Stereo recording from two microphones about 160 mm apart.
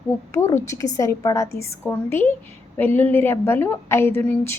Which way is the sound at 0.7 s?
20° left (ahead or behind).